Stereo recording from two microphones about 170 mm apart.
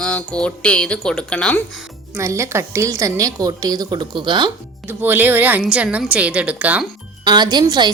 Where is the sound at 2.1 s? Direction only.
15° right (ahead or behind).